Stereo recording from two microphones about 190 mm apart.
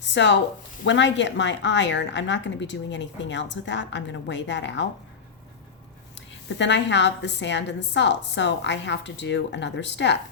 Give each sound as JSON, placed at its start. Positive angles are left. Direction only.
{"t": 0.1, "sound": "a woman's voice", "side_deg": 65}
{"t": 6.1, "sound": "a woman's voice", "side_deg": 70}